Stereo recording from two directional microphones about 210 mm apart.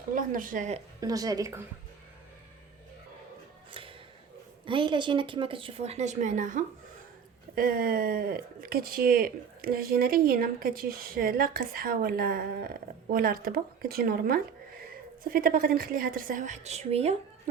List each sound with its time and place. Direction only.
0.1 s a woman's voice: 40° right (ahead or behind)
1.0 s a woman's voice: 15° right (ahead or behind)
3.7 s a sound: 25° right (ahead or behind)
4.6 s a woman's voice: 25° right (ahead or behind)